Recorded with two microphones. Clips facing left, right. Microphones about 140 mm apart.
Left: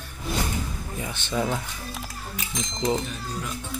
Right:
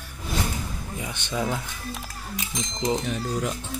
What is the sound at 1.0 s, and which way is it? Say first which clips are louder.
Speech: left 1 dB; 15° right (ahead or behind).